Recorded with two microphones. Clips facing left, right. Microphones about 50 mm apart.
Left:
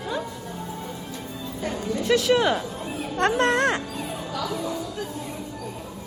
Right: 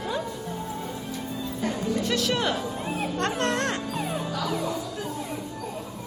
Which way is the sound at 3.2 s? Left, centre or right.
Left.